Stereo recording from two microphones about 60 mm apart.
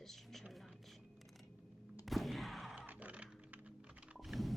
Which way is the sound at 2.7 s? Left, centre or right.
Right.